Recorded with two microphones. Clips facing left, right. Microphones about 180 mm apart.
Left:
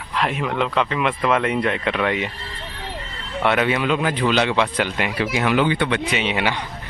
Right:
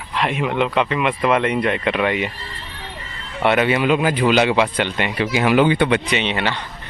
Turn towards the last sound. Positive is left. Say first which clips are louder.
# right 1 dB
turn(degrees=10)  # may be behind; listen again after turning